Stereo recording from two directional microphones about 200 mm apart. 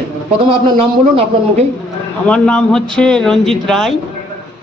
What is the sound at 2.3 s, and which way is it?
A man's voice, 5° left (ahead or behind).